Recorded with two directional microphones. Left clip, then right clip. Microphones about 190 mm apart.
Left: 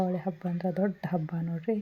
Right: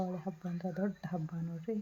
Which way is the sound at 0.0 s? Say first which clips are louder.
Left 9 dB; 20° left (ahead or behind).